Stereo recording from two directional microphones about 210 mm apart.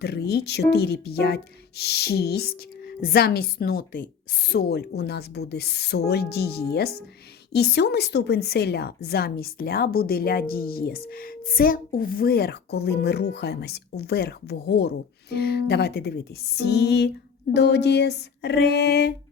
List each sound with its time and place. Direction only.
0.0 s a woman's voice: 50° left (ahead or behind)